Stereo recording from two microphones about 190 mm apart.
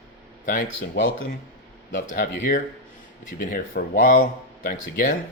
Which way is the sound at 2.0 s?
40° left (ahead or behind).